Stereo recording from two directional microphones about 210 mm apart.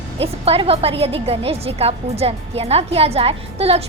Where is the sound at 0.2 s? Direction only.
25° right (ahead or behind).